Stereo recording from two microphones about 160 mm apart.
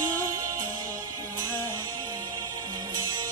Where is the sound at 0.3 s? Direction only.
20° right (ahead or behind).